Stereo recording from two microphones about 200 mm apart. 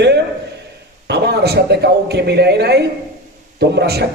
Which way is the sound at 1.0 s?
55° right (ahead or behind).